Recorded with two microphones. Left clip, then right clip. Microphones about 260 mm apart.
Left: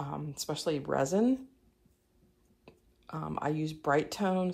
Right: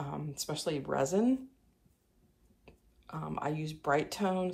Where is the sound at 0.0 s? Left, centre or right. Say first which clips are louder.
Left 1 dB; centre.